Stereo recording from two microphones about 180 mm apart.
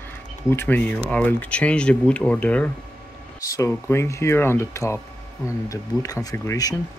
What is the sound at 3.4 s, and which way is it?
Speech, 20° left (ahead or behind).